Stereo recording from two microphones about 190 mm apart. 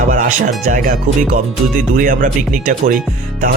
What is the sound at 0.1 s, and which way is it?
Speech, 45° right (ahead or behind).